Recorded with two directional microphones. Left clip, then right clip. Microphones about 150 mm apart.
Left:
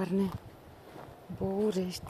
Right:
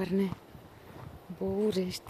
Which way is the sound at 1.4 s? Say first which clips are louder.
Right 1 dB; 20° right (ahead or behind).